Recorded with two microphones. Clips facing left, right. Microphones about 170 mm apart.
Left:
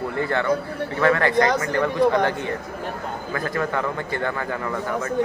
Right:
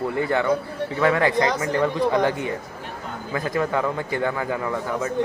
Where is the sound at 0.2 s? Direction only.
15° right (ahead or behind).